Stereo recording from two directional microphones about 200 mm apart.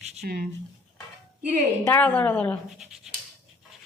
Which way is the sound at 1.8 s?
10° left (ahead or behind).